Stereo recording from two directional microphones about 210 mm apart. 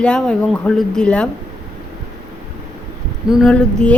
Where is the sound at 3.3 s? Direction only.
Centre (ahead or behind).